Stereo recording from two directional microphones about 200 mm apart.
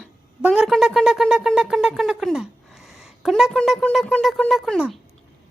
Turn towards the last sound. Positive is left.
turn(degrees=0)  # may be behind; listen again after turning